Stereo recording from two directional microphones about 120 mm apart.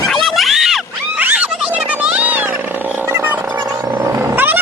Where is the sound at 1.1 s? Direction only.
15° right (ahead or behind).